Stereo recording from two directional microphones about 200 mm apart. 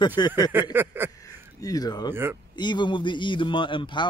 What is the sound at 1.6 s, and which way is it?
Speech, 20° left (ahead or behind).